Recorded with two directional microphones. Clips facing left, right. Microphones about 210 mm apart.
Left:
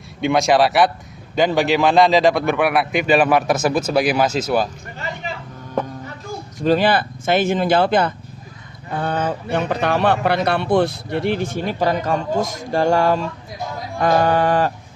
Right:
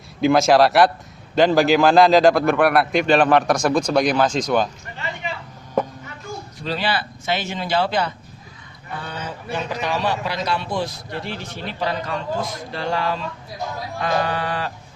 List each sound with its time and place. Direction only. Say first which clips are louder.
0.2 s speech: right 1 dB; centre (ahead or behind)
6.6 s a man's voice: left 9 dB; 50° left (ahead or behind)